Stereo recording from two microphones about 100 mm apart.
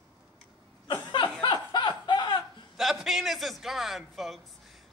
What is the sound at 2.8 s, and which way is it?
A man's voice, 5° right (ahead or behind).